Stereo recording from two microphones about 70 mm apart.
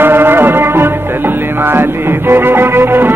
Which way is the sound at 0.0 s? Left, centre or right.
Right.